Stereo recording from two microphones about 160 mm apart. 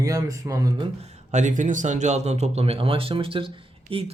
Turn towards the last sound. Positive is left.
turn(degrees=-35)  # may be behind; listen again after turning